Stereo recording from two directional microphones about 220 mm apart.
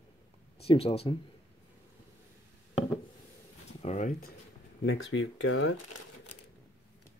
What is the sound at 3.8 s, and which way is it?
Speech, 30° left (ahead or behind).